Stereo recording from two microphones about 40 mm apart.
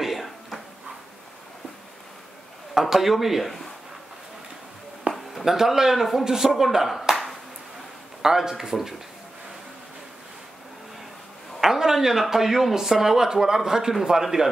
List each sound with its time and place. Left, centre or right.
0.0 s a sound: centre
2.7 s a man's voice: centre
5.1 s a sound: right
5.4 s a man's voice: centre
8.2 s a man's voice: centre
11.6 s a man's voice: centre